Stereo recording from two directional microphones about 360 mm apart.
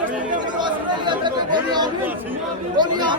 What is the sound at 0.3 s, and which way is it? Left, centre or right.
Chatter, centre.